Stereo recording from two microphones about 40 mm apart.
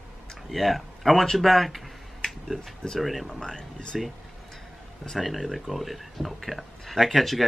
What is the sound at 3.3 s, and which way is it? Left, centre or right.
Speech, centre.